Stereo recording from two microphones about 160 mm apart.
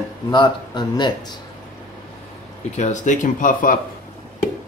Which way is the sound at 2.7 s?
45° left (ahead or behind).